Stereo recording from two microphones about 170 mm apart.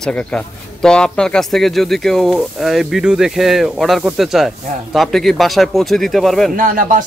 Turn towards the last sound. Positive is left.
turn(degrees=-50)  # may be behind; listen again after turning